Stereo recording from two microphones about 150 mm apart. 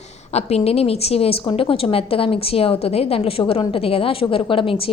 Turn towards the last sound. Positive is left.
turn(degrees=35)  # may be behind; listen again after turning